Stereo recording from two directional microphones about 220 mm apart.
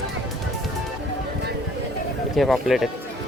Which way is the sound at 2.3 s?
Centre (ahead or behind).